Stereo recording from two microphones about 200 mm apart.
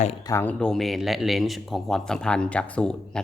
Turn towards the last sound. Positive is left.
turn(degrees=5)  # may be behind; listen again after turning